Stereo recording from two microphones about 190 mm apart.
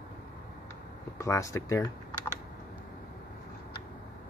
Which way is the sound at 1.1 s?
15° left (ahead or behind).